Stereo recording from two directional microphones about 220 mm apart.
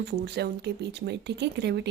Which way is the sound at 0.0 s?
50° right (ahead or behind).